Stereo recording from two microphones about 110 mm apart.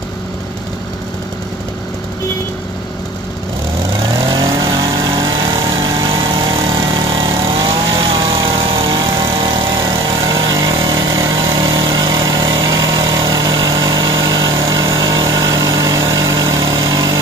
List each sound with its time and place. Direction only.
4.6 s vehicle: 45° right (ahead or behind)